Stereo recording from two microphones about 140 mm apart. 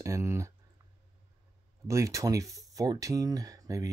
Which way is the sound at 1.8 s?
20° right (ahead or behind).